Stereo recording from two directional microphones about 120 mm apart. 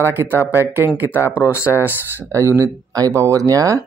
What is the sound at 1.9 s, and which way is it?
Speech, 20° right (ahead or behind).